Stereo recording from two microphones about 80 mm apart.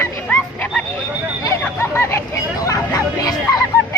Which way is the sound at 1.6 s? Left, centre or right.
Left.